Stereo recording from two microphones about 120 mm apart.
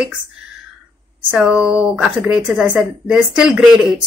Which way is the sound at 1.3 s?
5° right (ahead or behind).